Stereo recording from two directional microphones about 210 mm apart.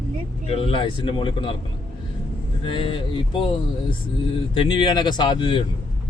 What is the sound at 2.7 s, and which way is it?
Speech, 25° left (ahead or behind).